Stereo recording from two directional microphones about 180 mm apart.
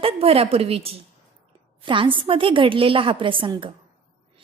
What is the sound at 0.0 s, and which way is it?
A woman's voice, 35° right (ahead or behind).